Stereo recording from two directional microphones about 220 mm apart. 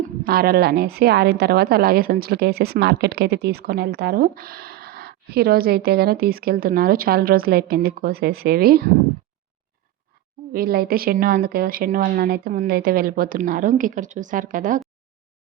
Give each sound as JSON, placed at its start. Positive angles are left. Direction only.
{"t": 0.3, "sound": "a woman's voice", "side_deg": -45}
{"t": 10.5, "sound": "a woman's voice", "side_deg": -40}